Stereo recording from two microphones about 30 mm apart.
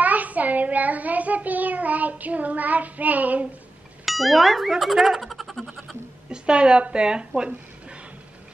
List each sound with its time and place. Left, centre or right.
0.0 s child singing: right
4.0 s speech: centre
5.2 s a sound: centre
6.3 s speech: right